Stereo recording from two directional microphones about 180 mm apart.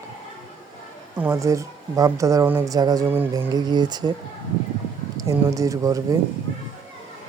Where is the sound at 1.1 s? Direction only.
10° right (ahead or behind).